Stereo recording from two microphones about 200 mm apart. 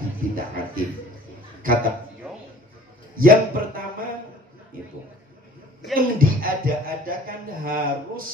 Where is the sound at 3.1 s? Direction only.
45° right (ahead or behind).